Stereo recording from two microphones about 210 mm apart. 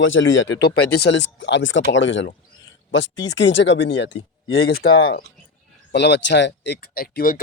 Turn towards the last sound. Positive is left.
turn(degrees=45)  # may be behind; listen again after turning